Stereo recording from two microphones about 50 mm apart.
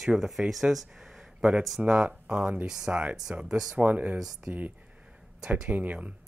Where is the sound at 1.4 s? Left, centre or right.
Centre.